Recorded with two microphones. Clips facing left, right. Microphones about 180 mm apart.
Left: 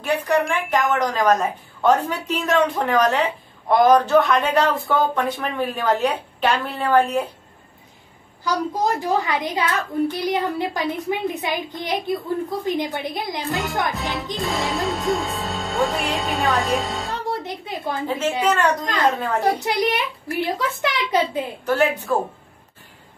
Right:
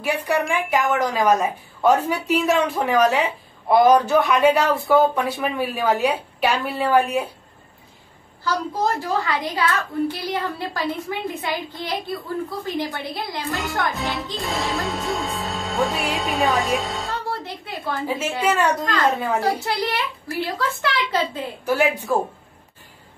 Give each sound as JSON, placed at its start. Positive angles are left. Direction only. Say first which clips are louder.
{"t": 0.0, "sound": "speech", "louder": "left 2 dB", "side_deg": -10}
{"t": 8.5, "sound": "a child's voice", "louder": "left 1 dB", "side_deg": 15}
{"t": 13.9, "sound": "music", "louder": "left 1 dB", "side_deg": 0}
{"t": 17.3, "sound": "a woman's voice", "louder": "left 3 dB", "side_deg": 20}
{"t": 18.0, "sound": "speech", "louder": "left 2 dB", "side_deg": -10}
{"t": 19.6, "sound": "a child's voice", "louder": "left 3 dB", "side_deg": 15}
{"t": 21.6, "sound": "speech", "louder": "even", "side_deg": -10}